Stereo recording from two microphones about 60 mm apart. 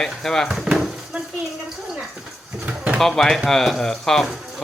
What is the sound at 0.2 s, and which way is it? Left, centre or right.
Speech, centre.